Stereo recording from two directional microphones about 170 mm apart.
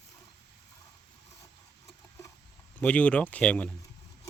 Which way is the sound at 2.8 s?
10° left (ahead or behind).